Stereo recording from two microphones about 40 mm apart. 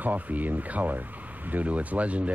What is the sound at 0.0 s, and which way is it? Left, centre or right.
Speech, right.